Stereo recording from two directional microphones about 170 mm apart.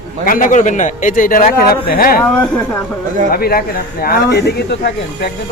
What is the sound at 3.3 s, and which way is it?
A man's voice, 65° left (ahead or behind).